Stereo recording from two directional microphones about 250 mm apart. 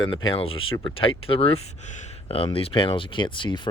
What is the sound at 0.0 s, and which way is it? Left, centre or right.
Speech, centre.